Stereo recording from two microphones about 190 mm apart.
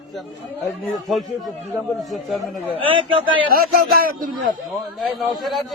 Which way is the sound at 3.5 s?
50° right (ahead or behind).